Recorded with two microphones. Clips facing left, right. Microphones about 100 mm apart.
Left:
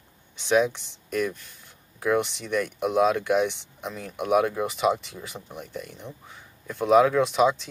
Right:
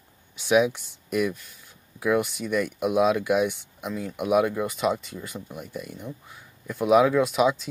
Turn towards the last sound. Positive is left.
turn(degrees=-5)  # may be behind; listen again after turning